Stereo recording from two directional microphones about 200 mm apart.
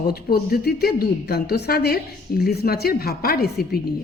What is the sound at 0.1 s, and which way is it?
A woman's voice, 50° left (ahead or behind).